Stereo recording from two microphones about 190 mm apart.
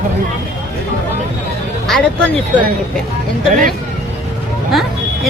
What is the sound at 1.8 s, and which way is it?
Speech, centre (ahead or behind).